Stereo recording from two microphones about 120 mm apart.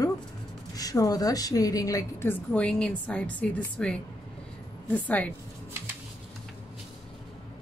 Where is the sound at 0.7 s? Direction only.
30° left (ahead or behind); by 5.3 s 15° left (ahead or behind).